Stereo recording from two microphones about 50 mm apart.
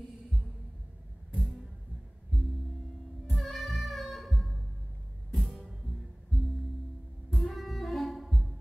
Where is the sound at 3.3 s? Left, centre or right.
Centre.